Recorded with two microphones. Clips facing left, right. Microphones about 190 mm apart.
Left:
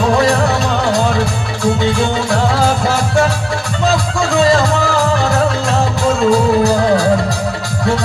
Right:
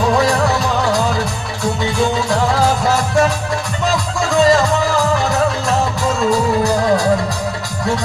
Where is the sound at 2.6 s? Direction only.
30° left (ahead or behind).